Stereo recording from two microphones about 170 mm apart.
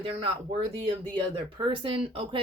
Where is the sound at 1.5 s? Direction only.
30° right (ahead or behind).